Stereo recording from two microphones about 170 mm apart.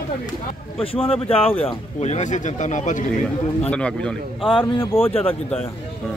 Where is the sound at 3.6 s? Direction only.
5° left (ahead or behind).